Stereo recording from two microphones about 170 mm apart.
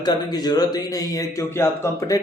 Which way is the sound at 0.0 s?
25° left (ahead or behind).